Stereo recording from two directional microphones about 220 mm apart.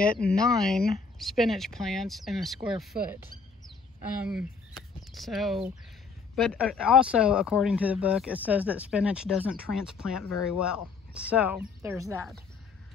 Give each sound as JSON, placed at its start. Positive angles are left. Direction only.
{"t": 0.2, "sound": "speech", "side_deg": 45}
{"t": 0.6, "sound": "speech", "side_deg": 0}
{"t": 4.2, "sound": "speech", "side_deg": -5}